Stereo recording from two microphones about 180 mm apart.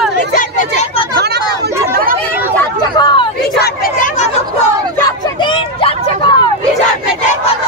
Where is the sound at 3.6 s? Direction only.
50° left (ahead or behind).